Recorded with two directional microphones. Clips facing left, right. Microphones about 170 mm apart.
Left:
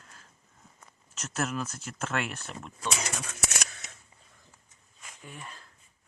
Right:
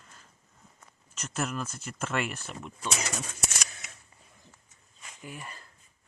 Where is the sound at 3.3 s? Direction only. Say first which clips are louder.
Left 2 dB; 65° left (ahead or behind).